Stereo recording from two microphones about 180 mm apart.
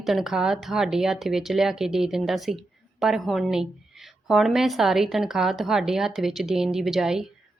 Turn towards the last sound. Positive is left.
turn(degrees=0)  # may be behind; listen again after turning